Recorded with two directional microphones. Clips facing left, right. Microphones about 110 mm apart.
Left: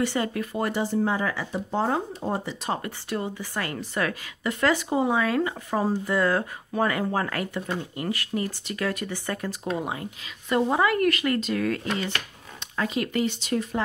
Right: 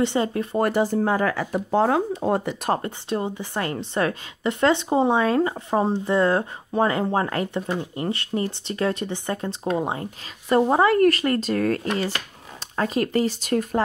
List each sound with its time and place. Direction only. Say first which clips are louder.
0.0 s a woman's voice: right 4 dB; 25° right (ahead or behind)
0.6 s speech: right 5 dB; 50° right (ahead or behind)
1.5 s speech: right 6 dB; 75° right (ahead or behind); by 2.8 s 55° right (ahead or behind)
2.8 s a woman's voice: right 4 dB; 25° right (ahead or behind); by 13.8 s 45° right (ahead or behind)